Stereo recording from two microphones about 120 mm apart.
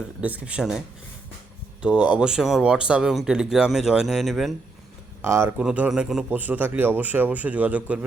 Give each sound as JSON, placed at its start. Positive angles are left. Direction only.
{"t": 0.2, "sound": "a man's voice", "side_deg": -10}
{"t": 1.8, "sound": "speech", "side_deg": -10}
{"t": 5.2, "sound": "speech", "side_deg": -20}
{"t": 5.5, "sound": "a man's voice", "side_deg": -10}
{"t": 6.3, "sound": "a man's voice", "side_deg": -15}